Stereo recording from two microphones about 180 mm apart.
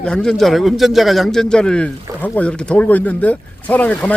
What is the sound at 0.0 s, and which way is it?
A man's voice, 5° left (ahead or behind).